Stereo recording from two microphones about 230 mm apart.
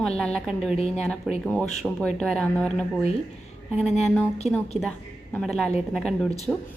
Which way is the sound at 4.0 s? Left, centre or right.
Centre.